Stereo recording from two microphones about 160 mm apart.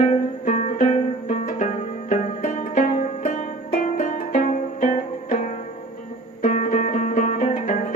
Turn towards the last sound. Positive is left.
turn(degrees=50)  # may be behind; listen again after turning